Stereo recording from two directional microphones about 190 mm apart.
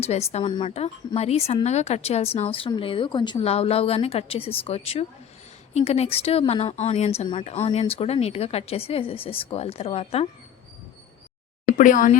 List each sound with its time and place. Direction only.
0.0 s a woman's voice: 35° left (ahead or behind)
11.6 s speech: 45° left (ahead or behind)